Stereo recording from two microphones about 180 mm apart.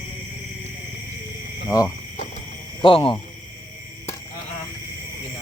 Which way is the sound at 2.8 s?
30° left (ahead or behind).